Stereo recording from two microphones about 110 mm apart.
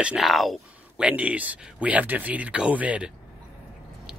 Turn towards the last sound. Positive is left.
turn(degrees=-10)  # may be behind; listen again after turning